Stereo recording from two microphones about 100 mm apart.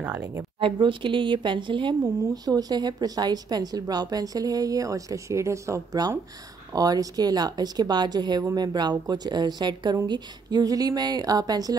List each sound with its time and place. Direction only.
0.2 s speech: 30° right (ahead or behind)
0.6 s speech: 60° right (ahead or behind); by 11.7 s 40° right (ahead or behind)